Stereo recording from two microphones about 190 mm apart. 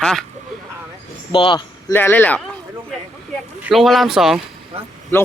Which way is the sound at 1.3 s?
25° left (ahead or behind).